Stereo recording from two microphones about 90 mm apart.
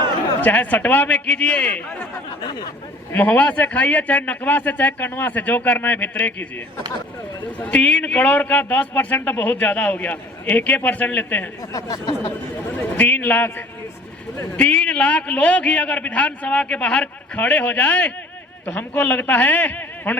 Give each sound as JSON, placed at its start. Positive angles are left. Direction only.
{"t": 0.4, "sound": "a man's voice", "side_deg": 20}
{"t": 2.4, "sound": "speech", "side_deg": 55}
{"t": 3.1, "sound": "a man's voice", "side_deg": 15}
{"t": 7.6, "sound": "a man's voice", "side_deg": 15}
{"t": 11.7, "sound": "speech", "side_deg": 45}
{"t": 12.7, "sound": "a man's voice", "side_deg": 20}
{"t": 14.5, "sound": "a man's voice", "side_deg": 15}